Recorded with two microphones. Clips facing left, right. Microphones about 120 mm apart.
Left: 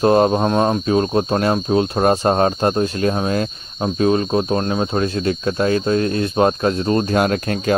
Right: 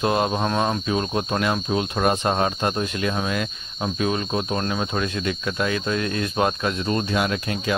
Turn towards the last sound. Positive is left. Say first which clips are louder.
# left 6 dB
turn(degrees=50)  # may be behind; listen again after turning